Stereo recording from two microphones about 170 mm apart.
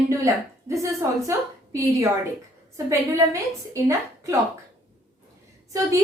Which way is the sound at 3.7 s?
15° right (ahead or behind).